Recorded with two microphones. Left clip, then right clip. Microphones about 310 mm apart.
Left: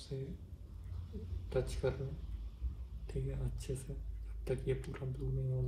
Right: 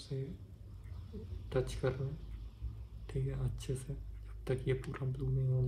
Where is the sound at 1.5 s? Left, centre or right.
Right.